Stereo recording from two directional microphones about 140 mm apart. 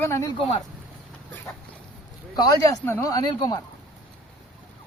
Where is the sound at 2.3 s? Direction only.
25° left (ahead or behind).